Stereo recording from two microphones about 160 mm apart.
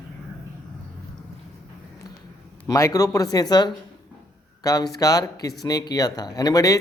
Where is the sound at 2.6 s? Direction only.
20° left (ahead or behind).